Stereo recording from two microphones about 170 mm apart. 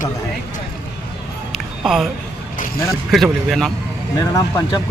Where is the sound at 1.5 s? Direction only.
Centre (ahead or behind).